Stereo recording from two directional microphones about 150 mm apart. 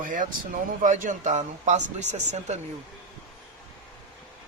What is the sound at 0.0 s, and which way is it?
Speech, 60° right (ahead or behind).